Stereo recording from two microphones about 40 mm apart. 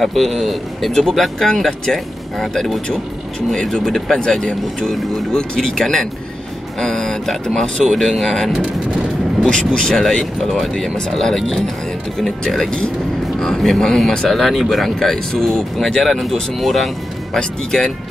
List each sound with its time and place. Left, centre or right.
0.0 s speech: centre
7.8 s speech: centre
9.8 s speech: centre
17.3 s speech: centre